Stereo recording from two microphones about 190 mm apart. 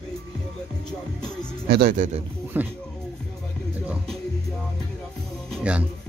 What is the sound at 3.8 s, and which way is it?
Music, 5° right (ahead or behind).